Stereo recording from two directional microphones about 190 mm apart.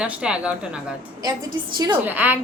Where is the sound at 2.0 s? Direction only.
10° right (ahead or behind).